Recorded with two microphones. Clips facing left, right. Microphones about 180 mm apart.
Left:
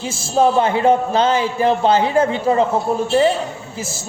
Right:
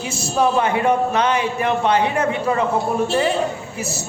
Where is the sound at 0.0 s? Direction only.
25° left (ahead or behind).